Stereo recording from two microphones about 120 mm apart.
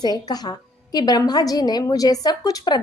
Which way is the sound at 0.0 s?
35° left (ahead or behind).